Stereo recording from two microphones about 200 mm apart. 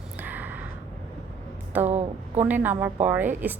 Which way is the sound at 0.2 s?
10° right (ahead or behind).